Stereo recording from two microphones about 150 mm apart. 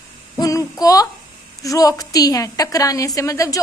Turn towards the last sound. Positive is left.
turn(degrees=20)  # may be behind; listen again after turning